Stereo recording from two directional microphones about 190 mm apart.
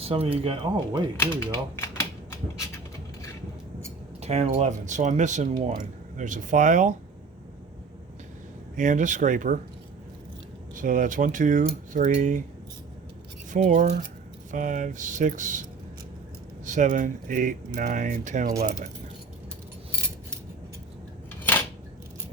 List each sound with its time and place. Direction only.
0.0 s speech: 30° right (ahead or behind)
1.2 s speech: 15° left (ahead or behind)
1.7 s a sound: 15° left (ahead or behind)
4.2 s speech: 35° right (ahead or behind)
8.7 s speech: 40° right (ahead or behind)
10.8 s speech: 45° right (ahead or behind)
13.5 s speech: 40° right (ahead or behind)
16.6 s speech: 40° right (ahead or behind)